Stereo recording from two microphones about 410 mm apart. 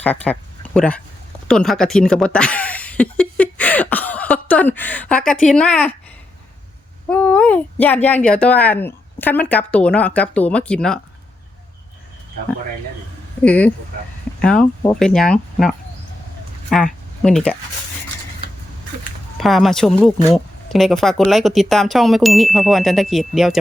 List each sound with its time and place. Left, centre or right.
0.0 s speech: centre
7.1 s speech: centre
13.4 s speech: centre
19.4 s speech: centre